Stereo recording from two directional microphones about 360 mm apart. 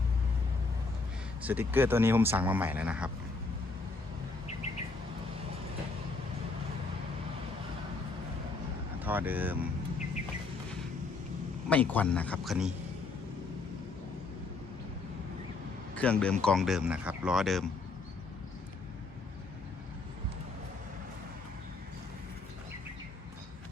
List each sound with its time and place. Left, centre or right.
1.4 s speech: centre
9.0 s speech: centre
11.7 s speech: centre
16.0 s speech: centre